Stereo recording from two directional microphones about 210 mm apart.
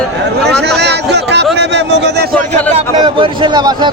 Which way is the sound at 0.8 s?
55° right (ahead or behind).